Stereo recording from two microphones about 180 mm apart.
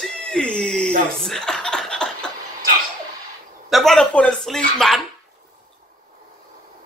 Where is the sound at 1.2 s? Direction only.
5° left (ahead or behind).